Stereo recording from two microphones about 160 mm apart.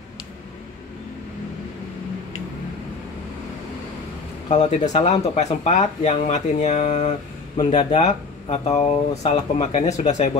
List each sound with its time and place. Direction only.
4.5 s speech: 45° left (ahead or behind)